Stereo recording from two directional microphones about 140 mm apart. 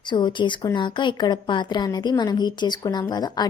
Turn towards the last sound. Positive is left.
turn(degrees=30)  # may be behind; listen again after turning